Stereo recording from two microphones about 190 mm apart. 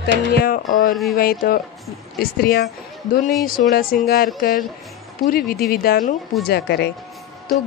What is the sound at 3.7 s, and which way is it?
Speech, 50° left (ahead or behind).